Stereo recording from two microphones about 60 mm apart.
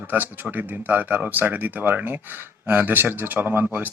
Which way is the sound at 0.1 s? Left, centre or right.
Right.